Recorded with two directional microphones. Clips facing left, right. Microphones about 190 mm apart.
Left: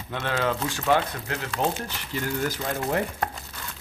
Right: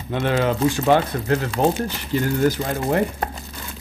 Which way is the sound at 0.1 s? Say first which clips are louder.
Right 6 dB; 20° right (ahead or behind).